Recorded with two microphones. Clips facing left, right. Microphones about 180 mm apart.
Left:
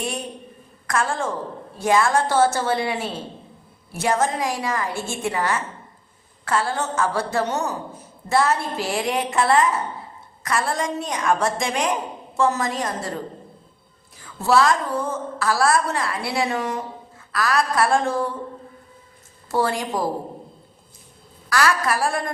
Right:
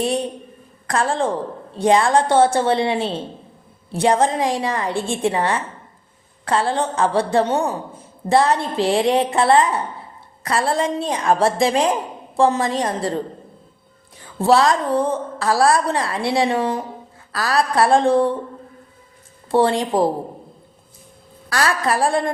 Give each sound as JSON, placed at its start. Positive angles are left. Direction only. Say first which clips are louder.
{"t": 0.0, "sound": "a woman's voice", "louder": "right 8 dB", "side_deg": -35}
{"t": 19.5, "sound": "a woman's voice", "louder": "right 6 dB", "side_deg": -30}
{"t": 21.5, "sound": "a woman's voice", "louder": "right 1 dB", "side_deg": -30}